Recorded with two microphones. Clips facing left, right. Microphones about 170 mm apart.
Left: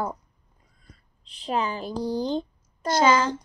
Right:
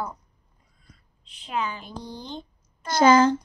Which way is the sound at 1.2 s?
35° left (ahead or behind).